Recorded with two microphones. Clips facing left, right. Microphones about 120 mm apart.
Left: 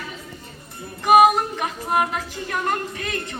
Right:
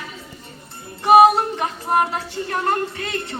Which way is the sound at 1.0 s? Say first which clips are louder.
Right 2 dB; 30° right (ahead or behind).